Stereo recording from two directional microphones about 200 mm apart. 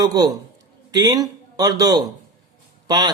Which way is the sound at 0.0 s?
20° right (ahead or behind).